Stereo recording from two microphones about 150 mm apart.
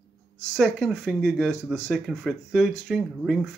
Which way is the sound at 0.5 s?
Centre (ahead or behind).